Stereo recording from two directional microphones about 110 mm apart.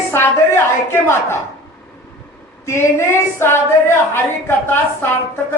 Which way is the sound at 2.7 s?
25° left (ahead or behind).